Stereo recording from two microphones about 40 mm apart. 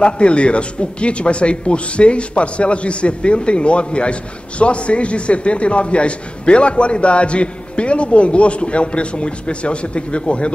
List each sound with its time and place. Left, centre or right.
0.0 s speech: left